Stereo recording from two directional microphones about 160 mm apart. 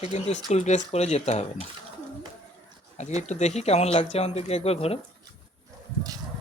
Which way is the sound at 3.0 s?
45° left (ahead or behind).